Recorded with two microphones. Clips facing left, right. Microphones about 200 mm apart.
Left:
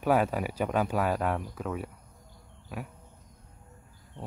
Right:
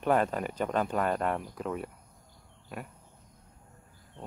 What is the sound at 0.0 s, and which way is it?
Speech, 5° left (ahead or behind).